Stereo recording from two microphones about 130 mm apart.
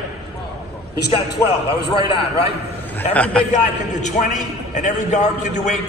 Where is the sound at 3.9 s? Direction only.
65° left (ahead or behind).